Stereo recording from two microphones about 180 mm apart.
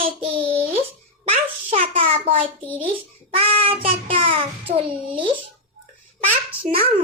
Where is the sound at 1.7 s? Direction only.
35° right (ahead or behind).